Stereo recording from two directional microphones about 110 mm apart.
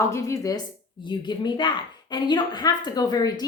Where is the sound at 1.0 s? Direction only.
45° left (ahead or behind).